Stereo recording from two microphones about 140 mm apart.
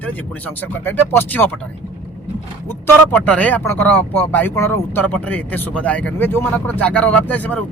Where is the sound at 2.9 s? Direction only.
10° left (ahead or behind).